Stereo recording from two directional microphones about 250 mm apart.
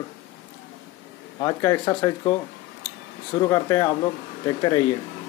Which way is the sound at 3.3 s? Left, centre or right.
Centre.